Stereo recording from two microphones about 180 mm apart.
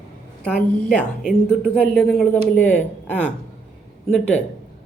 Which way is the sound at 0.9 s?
5° left (ahead or behind).